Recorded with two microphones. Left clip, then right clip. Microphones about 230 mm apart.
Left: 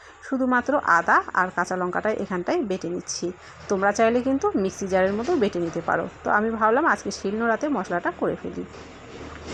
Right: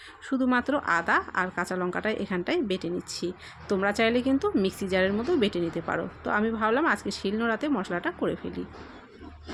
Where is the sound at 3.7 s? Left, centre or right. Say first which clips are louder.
Left 4 dB; centre.